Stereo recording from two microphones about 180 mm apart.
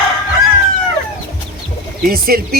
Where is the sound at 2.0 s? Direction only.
55° right (ahead or behind).